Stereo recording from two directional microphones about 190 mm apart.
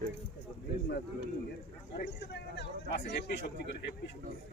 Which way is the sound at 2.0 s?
60° left (ahead or behind).